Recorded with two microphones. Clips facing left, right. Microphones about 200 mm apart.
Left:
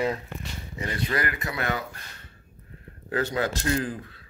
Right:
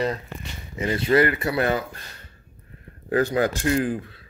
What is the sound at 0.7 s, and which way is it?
Speech, 25° right (ahead or behind).